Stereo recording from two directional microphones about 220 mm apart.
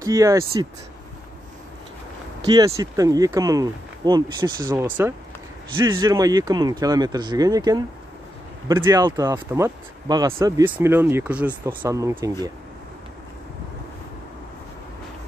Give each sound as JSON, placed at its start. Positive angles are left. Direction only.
{"t": 0.0, "sound": "speech", "side_deg": -15}
{"t": 2.4, "sound": "speech", "side_deg": -15}